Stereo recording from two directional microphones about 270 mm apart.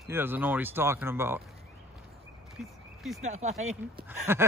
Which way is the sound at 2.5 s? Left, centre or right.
Centre.